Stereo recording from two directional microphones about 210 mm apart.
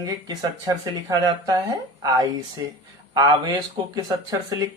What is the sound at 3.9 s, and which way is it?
Speech, 20° right (ahead or behind).